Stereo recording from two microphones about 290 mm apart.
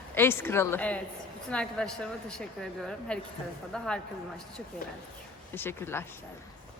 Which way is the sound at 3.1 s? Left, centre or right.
Centre.